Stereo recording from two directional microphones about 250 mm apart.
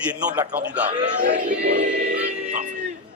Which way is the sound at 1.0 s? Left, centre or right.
Right.